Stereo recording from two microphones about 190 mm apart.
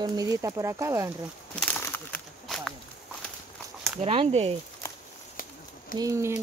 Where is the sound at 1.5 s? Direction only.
10° left (ahead or behind).